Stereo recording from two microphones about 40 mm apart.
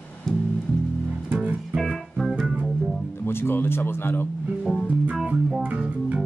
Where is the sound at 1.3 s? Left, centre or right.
Right.